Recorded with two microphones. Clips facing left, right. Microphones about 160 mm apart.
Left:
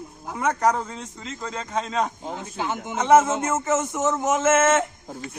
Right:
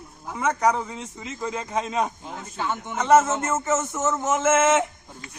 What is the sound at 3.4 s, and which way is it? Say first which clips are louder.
Speech: left 1 dB; 5° left (ahead or behind).